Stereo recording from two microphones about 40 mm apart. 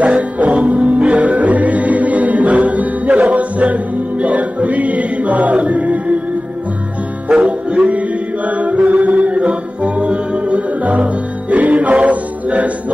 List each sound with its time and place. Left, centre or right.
0.0 s music: right
7.2 s music: right